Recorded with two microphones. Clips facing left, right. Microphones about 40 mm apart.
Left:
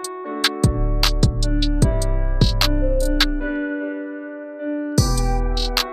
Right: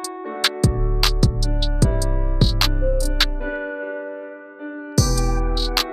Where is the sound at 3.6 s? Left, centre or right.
Centre.